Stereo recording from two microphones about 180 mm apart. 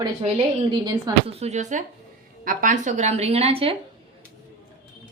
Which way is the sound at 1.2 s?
35° right (ahead or behind).